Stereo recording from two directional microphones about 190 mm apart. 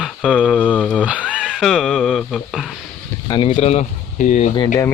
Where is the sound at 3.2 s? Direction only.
25° left (ahead or behind).